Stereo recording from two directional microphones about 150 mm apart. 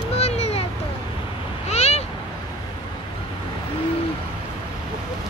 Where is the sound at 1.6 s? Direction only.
45° left (ahead or behind).